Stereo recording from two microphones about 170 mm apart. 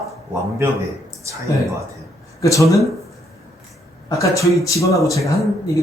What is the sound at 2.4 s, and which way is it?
Speech, 20° left (ahead or behind).